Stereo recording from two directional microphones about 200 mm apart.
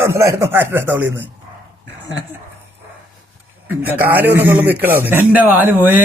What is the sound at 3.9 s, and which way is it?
A man's voice, 10° right (ahead or behind).